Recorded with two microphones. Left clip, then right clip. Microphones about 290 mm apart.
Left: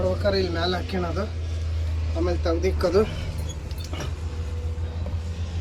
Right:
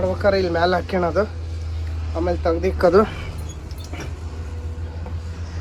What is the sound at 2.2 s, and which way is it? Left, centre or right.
Speech, centre.